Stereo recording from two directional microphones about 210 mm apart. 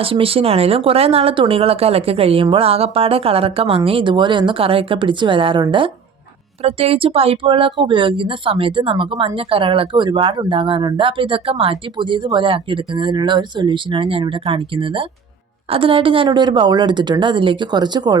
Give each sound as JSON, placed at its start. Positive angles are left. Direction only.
{"t": 0.0, "sound": "speech", "side_deg": -25}